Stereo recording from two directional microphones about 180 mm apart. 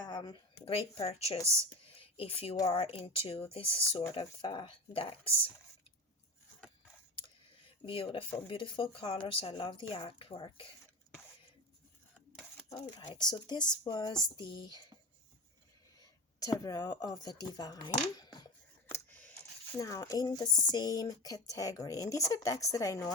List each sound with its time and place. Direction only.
0.0 s speech: 25° left (ahead or behind)
1.9 s a sound: 30° left (ahead or behind)
2.6 s speech: 35° left (ahead or behind)
7.9 s speech: 30° left (ahead or behind)
12.6 s a sound: 35° left (ahead or behind)
13.1 s speech: 25° left (ahead or behind)
16.0 s speech: 20° left (ahead or behind)
18.9 s scissors: 10° left (ahead or behind)
19.7 s speech: 15° left (ahead or behind)